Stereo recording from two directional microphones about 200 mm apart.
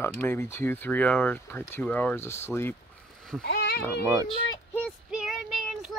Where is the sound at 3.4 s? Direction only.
55° left (ahead or behind).